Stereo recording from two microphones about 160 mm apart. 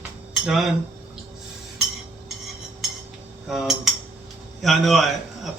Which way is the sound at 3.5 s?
Centre (ahead or behind).